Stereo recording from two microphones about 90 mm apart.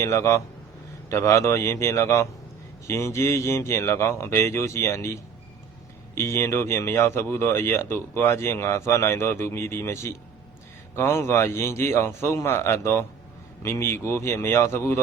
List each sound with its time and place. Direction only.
0.0 s speech: 30° left (ahead or behind)